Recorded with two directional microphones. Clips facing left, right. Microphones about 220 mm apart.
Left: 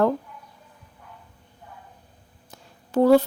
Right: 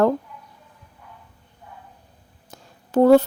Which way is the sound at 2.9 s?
45° right (ahead or behind).